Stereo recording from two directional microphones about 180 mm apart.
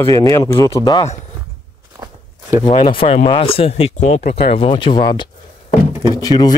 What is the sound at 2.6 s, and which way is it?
Speech, 25° left (ahead or behind).